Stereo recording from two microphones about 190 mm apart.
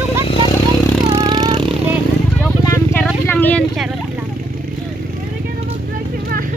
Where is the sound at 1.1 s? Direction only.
25° right (ahead or behind).